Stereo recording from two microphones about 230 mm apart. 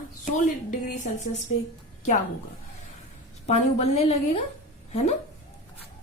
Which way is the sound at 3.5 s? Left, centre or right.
Left.